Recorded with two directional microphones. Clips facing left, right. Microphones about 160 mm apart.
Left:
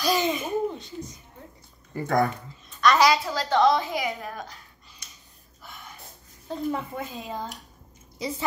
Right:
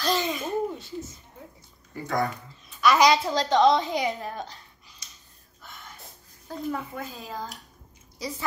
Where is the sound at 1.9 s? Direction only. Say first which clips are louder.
Left 4 dB; 50° left (ahead or behind).